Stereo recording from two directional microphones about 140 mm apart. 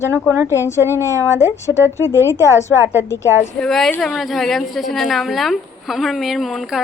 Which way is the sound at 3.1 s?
20° left (ahead or behind).